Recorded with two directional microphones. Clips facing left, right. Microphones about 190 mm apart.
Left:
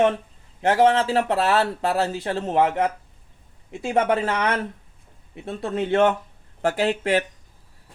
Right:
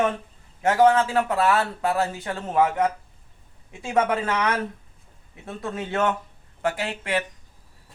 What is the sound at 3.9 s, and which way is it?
Speech, 30° left (ahead or behind).